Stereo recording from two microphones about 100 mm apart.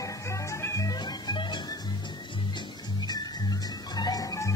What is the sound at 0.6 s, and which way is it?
Music, 30° left (ahead or behind).